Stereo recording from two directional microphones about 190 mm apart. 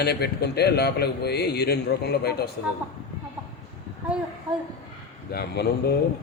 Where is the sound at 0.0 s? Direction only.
60° left (ahead or behind).